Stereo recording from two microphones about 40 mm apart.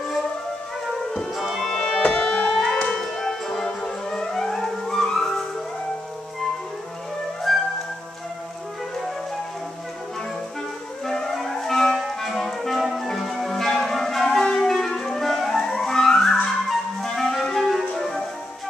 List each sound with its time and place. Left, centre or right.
1.3 s music: centre
1.7 s music: centre
2.0 s music: left
2.5 s music: centre
7.5 s music: centre
11.1 s music: centre
14.2 s clarinet: centre
15.0 s music: centre
16.3 s flute: centre
17.9 s music: centre